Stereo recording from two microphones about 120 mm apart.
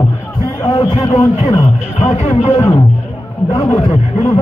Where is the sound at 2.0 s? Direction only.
60° left (ahead or behind).